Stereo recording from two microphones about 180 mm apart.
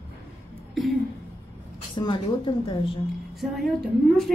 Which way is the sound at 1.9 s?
25° left (ahead or behind).